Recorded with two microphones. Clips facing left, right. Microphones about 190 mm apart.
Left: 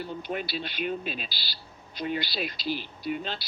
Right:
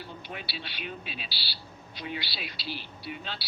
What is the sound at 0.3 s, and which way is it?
Speech, 50° left (ahead or behind).